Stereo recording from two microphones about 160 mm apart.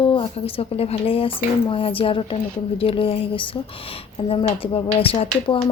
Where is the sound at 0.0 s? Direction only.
35° left (ahead or behind).